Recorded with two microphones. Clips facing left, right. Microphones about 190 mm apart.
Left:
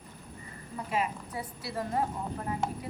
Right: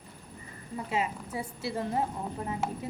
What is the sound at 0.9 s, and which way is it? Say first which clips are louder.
A woman's voice: even; 25° right (ahead or behind).